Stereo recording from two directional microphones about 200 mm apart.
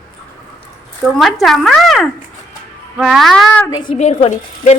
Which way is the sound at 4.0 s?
35° left (ahead or behind).